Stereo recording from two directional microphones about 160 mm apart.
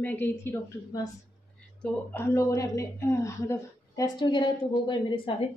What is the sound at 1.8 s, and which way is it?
A woman's voice, 15° left (ahead or behind).